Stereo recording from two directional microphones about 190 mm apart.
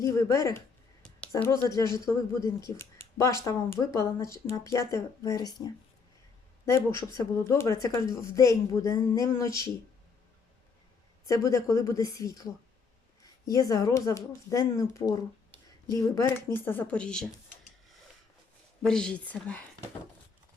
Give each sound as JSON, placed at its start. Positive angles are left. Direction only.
{"t": 0.0, "sound": "speech", "side_deg": 15}
{"t": 11.3, "sound": "speech", "side_deg": 15}
{"t": 18.8, "sound": "speech", "side_deg": 5}